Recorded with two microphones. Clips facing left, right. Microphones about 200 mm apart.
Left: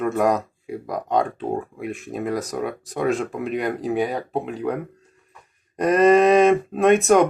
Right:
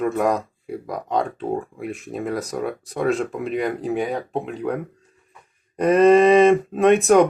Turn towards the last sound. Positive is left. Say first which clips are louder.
# right 1 dB
turn(degrees=0)  # may be behind; listen again after turning